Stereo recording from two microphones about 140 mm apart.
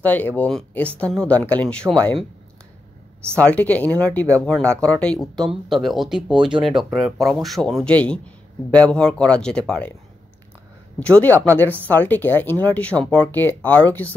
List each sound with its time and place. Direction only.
0.0 s speech: 10° left (ahead or behind)
3.3 s speech: 10° left (ahead or behind)
6.3 s speech: 35° right (ahead or behind)
6.8 s speech: centre (ahead or behind)
11.0 s speech: 10° left (ahead or behind)